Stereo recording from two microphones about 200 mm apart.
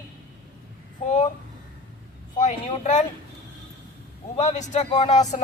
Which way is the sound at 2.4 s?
35° left (ahead or behind).